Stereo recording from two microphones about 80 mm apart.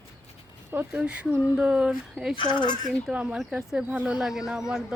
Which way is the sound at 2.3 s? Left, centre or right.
Left.